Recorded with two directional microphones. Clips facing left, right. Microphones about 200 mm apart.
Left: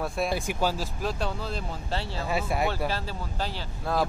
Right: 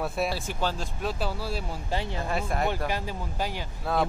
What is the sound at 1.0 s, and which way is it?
Speech, 5° right (ahead or behind).